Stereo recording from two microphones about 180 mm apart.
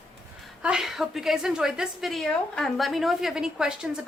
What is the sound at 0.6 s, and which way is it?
A woman's voice, 5° right (ahead or behind).